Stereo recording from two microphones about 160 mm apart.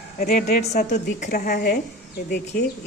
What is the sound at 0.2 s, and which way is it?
A woman's voice, 60° left (ahead or behind).